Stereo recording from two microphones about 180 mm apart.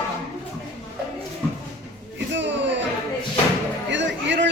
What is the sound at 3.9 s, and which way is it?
Music, 85° right.